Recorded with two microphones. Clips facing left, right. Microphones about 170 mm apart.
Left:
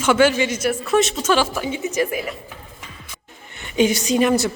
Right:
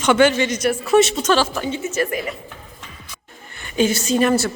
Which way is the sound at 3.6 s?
15° left (ahead or behind).